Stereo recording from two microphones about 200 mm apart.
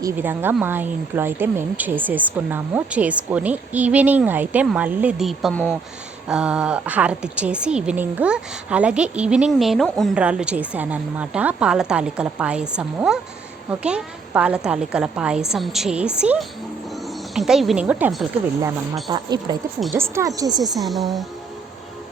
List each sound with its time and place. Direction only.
0.0 s a woman's voice: 10° right (ahead or behind)
19.0 s speech: 20° right (ahead or behind)
20.7 s a woman's voice: centre (ahead or behind)